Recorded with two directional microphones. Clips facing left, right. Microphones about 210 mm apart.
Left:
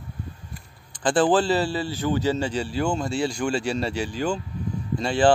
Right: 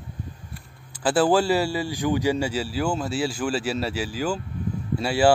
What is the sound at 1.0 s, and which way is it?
Speech, 5° right (ahead or behind).